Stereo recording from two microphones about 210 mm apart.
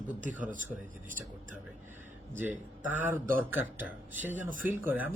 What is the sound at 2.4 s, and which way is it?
Speech, 10° right (ahead or behind).